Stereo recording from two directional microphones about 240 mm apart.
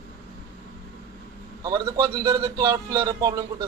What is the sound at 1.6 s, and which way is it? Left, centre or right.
A man's voice, centre.